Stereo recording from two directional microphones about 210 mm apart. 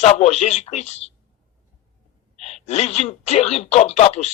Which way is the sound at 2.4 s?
30° left (ahead or behind).